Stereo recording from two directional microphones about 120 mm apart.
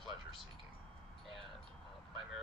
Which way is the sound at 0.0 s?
Centre (ahead or behind).